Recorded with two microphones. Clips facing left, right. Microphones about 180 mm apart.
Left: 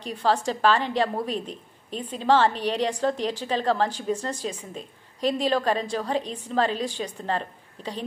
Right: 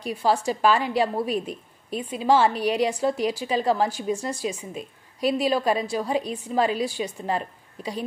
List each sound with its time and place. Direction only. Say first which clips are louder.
0.0 s a woman's voice: right 1 dB; 10° right (ahead or behind)